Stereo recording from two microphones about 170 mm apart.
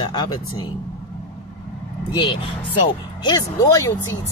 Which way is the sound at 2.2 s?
30° left (ahead or behind).